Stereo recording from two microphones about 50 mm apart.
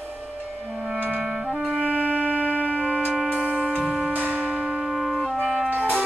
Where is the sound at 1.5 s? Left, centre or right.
Right.